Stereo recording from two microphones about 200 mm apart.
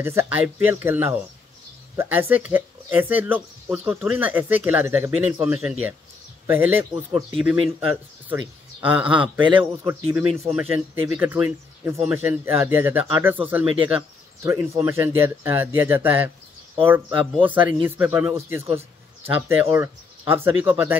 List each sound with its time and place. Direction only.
0.0 s speech: 10° right (ahead or behind)
9.4 s a man's voice: 25° right (ahead or behind)
9.8 s speech: 15° right (ahead or behind)
17.4 s speech: 10° right (ahead or behind)